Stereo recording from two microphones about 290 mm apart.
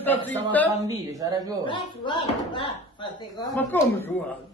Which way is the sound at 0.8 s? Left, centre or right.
Centre.